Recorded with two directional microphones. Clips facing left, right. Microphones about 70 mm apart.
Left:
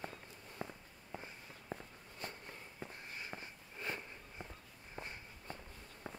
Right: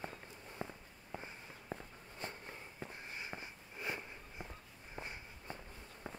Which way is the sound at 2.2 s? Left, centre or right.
Right.